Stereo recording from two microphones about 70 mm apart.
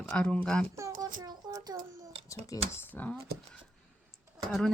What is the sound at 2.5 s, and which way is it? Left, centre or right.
Speech, left.